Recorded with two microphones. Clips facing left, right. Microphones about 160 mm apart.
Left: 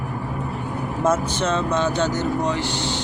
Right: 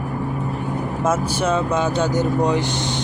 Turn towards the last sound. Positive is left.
turn(degrees=-20)  # may be behind; listen again after turning